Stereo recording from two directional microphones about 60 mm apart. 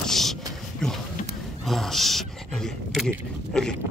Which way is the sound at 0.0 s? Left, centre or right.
Centre.